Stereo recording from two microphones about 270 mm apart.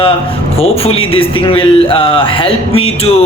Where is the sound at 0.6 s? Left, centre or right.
Left.